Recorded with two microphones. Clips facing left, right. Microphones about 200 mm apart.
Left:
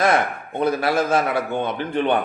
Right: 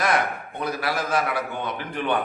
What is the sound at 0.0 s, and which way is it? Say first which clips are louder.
A man's voice: left 4 dB; 25° left (ahead or behind).